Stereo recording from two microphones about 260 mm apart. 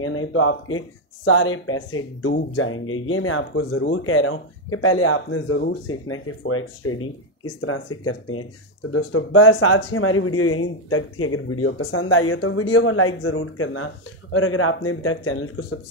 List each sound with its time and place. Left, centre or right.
0.0 s speech: left